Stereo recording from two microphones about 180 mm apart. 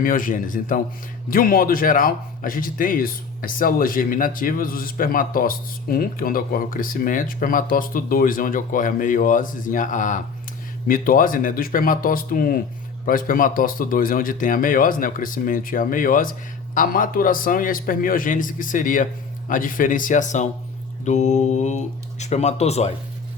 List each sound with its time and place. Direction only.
0.0 s speech: 50° left (ahead or behind)